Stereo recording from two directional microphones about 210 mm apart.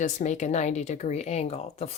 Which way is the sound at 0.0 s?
35° left (ahead or behind).